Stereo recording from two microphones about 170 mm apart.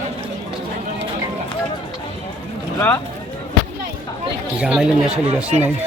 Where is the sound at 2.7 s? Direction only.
15° left (ahead or behind).